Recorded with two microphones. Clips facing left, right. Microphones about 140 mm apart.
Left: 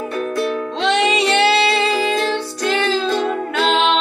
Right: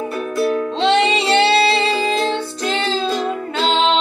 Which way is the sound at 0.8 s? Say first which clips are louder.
Right 1 dB; 30° right (ahead or behind).